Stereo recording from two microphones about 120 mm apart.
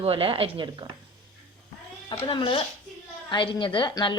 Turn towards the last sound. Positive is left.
turn(degrees=40)  # may be behind; listen again after turning